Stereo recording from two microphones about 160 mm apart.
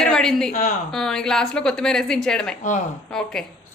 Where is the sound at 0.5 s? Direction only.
50° left (ahead or behind).